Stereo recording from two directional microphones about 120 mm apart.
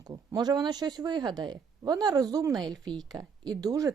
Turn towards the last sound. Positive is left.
turn(degrees=-30)  # may be behind; listen again after turning